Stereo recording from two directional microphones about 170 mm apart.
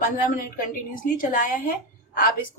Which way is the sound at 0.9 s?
55° left (ahead or behind).